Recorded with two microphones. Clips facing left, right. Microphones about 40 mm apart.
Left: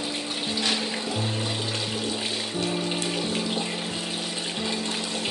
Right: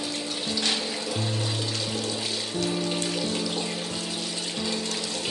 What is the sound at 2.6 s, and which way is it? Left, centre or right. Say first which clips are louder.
Music: right 1 dB; centre.